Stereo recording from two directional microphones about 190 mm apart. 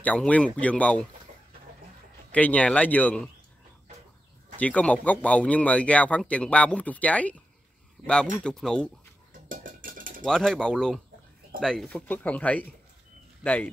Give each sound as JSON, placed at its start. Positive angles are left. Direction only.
{"t": 0.0, "sound": "speech", "side_deg": 10}
{"t": 2.3, "sound": "speech", "side_deg": 5}
{"t": 4.6, "sound": "speech", "side_deg": 5}
{"t": 9.5, "sound": "cutlery", "side_deg": -45}
{"t": 10.2, "sound": "speech", "side_deg": 0}